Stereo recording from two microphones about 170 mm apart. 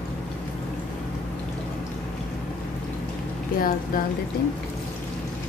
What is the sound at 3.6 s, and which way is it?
Speech, 55° left (ahead or behind).